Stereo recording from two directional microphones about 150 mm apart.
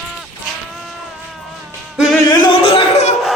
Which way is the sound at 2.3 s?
35° left (ahead or behind).